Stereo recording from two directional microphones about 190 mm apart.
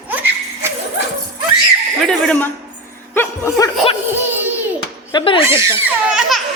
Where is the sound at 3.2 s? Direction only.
15° left (ahead or behind).